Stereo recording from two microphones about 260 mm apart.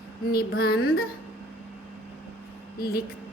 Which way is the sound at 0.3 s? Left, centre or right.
Left.